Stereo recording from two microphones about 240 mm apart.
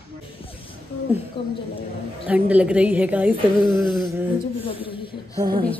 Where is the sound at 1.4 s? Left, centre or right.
Left.